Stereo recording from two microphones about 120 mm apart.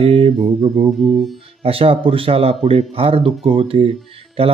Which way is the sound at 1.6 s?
50° right (ahead or behind).